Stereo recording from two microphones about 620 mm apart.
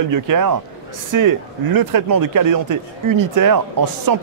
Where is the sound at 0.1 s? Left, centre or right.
Right.